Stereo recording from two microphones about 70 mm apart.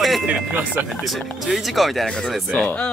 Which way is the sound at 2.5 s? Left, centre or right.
Centre.